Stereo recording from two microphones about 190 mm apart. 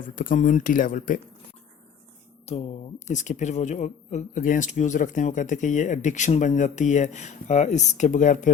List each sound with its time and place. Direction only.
0.2 s speech: 45° left (ahead or behind)
2.5 s speech: 35° left (ahead or behind)